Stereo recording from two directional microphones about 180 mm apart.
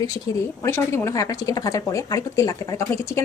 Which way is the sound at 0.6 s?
15° left (ahead or behind).